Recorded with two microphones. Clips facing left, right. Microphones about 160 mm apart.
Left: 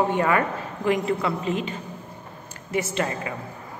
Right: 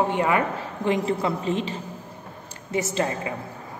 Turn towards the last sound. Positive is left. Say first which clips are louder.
# right 1 dB
turn(degrees=-25)  # may be behind; listen again after turning